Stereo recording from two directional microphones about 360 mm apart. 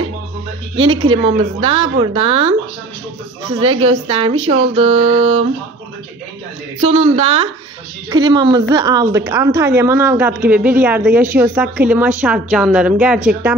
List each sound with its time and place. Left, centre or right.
0.7 s a woman's voice: centre
3.5 s a woman's voice: centre
6.8 s a woman's voice: centre